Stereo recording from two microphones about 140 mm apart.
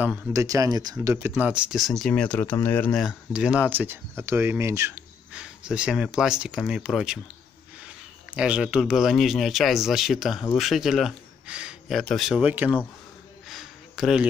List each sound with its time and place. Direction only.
0.3 s speech: 25° right (ahead or behind)
1.0 s speech: 15° right (ahead or behind); by 2.9 s 15° left (ahead or behind)
2.9 s speech: 5° right (ahead or behind); by 5.0 s 20° right (ahead or behind)
5.3 s a man's voice: 5° right (ahead or behind)
13.5 s a sound: centre (ahead or behind)